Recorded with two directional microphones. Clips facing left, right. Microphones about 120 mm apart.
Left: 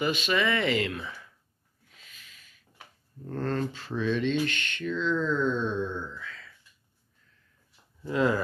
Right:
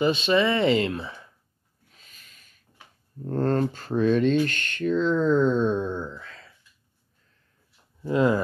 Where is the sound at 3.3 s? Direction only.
40° right (ahead or behind).